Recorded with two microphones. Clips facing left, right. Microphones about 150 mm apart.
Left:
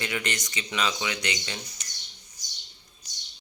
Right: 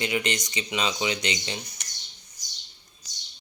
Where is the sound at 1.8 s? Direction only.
65° right (ahead or behind).